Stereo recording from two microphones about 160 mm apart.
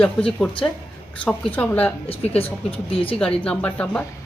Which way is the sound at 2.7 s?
35° left (ahead or behind).